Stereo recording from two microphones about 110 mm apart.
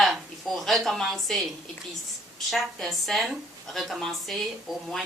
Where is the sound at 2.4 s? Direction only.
Centre (ahead or behind).